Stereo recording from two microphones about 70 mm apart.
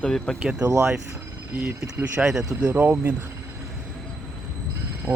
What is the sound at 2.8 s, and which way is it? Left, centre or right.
Speech, right.